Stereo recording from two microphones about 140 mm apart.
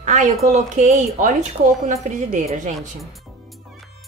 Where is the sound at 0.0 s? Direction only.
60° right (ahead or behind).